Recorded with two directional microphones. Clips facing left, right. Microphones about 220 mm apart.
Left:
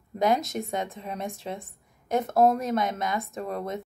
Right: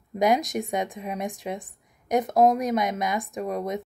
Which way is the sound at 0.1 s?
15° right (ahead or behind).